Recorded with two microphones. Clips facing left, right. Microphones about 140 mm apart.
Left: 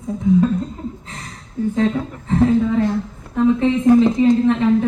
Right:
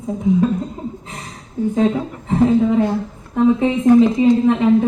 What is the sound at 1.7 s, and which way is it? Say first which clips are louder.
A woman's voice: right 2 dB; 15° right (ahead or behind).